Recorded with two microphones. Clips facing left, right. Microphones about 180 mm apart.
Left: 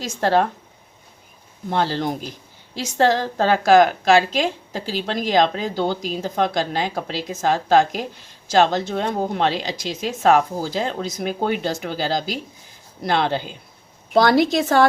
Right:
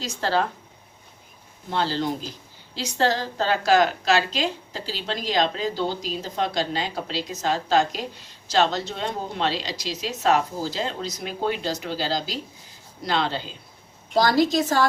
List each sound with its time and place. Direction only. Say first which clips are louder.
0.0 s a woman's voice: left 5 dB; 50° left (ahead or behind)
1.7 s a woman's voice: left 3 dB; 50° left (ahead or behind)